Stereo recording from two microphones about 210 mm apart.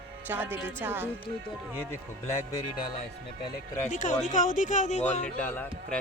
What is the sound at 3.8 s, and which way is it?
Speech, 35° left (ahead or behind).